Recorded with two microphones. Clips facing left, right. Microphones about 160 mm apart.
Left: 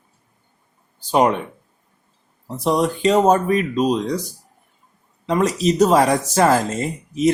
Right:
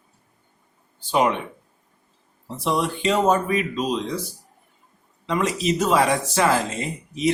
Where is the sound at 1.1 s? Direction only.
40° left (ahead or behind).